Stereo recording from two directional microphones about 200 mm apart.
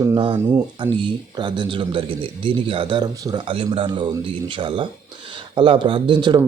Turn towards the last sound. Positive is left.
turn(degrees=-20)  # may be behind; listen again after turning